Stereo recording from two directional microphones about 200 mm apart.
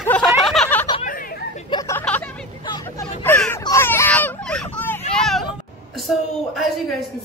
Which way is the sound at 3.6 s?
15° left (ahead or behind).